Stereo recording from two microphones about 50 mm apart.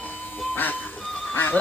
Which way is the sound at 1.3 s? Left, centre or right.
Left.